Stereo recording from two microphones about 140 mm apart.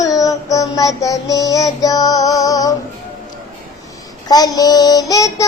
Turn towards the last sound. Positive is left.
turn(degrees=25)  # may be behind; listen again after turning